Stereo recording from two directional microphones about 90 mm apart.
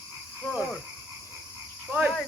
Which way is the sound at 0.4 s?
5° right (ahead or behind).